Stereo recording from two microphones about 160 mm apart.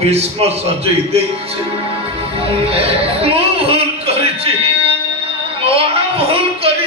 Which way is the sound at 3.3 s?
35° right (ahead or behind).